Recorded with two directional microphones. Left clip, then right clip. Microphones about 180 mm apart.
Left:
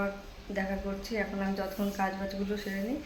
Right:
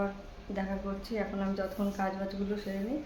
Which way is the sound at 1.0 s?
Centre (ahead or behind).